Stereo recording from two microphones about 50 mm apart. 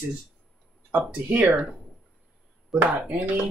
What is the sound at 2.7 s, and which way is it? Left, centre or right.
Speech, centre.